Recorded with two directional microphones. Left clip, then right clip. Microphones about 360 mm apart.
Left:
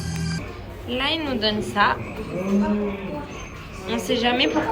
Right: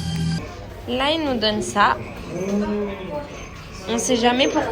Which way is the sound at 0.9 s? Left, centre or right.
Centre.